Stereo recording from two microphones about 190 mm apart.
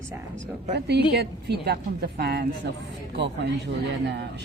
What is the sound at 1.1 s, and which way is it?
A woman's voice, 60° right (ahead or behind).